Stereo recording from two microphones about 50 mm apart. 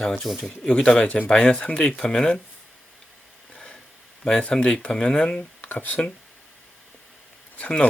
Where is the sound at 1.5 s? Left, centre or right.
Left.